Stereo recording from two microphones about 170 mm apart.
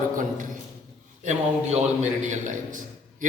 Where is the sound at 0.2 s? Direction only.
50° right (ahead or behind).